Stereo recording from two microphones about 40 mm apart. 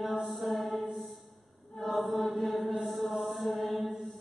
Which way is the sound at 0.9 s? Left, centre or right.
Centre.